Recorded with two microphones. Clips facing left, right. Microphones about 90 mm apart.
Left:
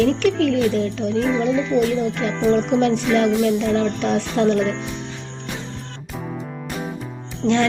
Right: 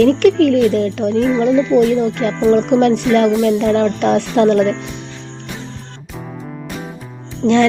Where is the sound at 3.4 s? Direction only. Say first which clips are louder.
Right 5 dB; 60° right (ahead or behind).